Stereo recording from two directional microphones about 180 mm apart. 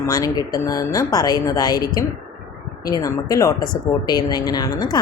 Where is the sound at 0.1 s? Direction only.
20° left (ahead or behind).